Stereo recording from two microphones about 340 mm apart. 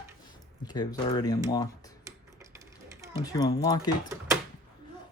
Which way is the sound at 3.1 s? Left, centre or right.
Centre.